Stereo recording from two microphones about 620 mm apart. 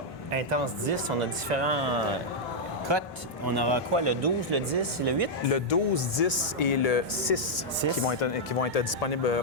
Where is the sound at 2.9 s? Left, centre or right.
Right.